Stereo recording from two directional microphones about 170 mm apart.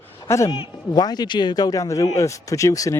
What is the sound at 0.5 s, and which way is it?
Speech, 30° left (ahead or behind).